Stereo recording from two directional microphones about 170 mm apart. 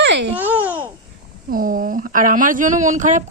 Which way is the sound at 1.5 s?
55° right (ahead or behind).